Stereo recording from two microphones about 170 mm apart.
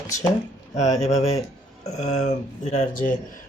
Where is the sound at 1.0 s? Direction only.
40° left (ahead or behind).